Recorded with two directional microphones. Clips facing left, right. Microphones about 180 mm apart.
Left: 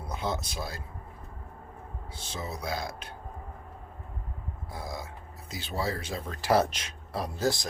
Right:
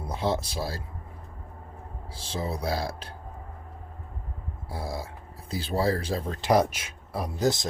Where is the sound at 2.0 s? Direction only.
30° right (ahead or behind).